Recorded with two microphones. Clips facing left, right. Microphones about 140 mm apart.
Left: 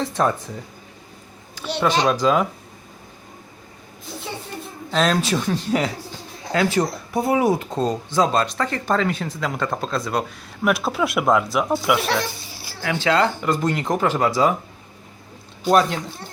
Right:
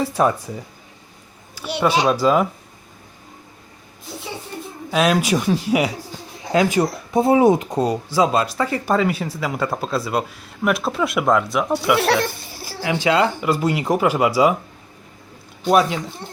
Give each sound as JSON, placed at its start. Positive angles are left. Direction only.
{"t": 0.0, "sound": "speech", "side_deg": -10}
{"t": 1.5, "sound": "speech", "side_deg": -10}
{"t": 4.9, "sound": "speech", "side_deg": -10}
{"t": 11.9, "sound": "speech", "side_deg": -65}
{"t": 12.8, "sound": "speech", "side_deg": -15}
{"t": 15.7, "sound": "speech", "side_deg": -5}
{"t": 16.2, "sound": "speech", "side_deg": -25}